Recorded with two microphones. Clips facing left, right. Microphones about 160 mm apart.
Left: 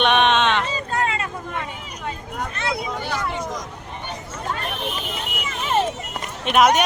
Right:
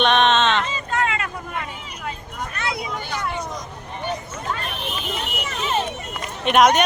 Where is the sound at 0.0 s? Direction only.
10° left (ahead or behind).